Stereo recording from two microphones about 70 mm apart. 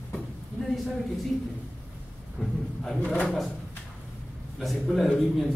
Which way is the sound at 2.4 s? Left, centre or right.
Centre.